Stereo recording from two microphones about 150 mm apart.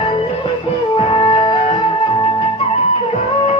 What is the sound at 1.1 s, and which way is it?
Music, 35° left (ahead or behind).